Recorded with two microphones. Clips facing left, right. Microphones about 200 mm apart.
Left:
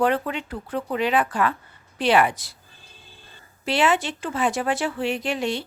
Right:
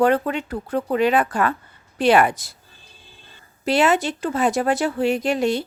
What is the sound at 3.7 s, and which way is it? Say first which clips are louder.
Speech: right 3 dB; 40° right (ahead or behind).